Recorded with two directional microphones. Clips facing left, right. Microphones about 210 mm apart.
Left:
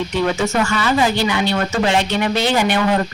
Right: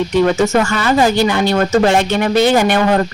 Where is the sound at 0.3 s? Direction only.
45° right (ahead or behind).